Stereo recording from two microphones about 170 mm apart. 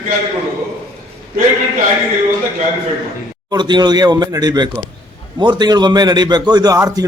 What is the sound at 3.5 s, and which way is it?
A man's voice, 25° right (ahead or behind).